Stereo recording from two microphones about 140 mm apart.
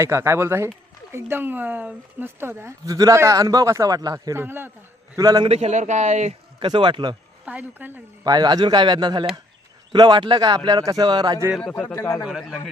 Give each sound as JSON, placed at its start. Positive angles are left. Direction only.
{"t": 0.0, "sound": "speech", "side_deg": -20}
{"t": 5.1, "sound": "speech", "side_deg": -25}
{"t": 5.5, "sound": "speech", "side_deg": -50}
{"t": 6.6, "sound": "speech", "side_deg": -35}
{"t": 7.4, "sound": "speech", "side_deg": -10}
{"t": 8.2, "sound": "speech", "side_deg": -30}
{"t": 11.7, "sound": "speech", "side_deg": 15}
{"t": 12.2, "sound": "a man's voice", "side_deg": 0}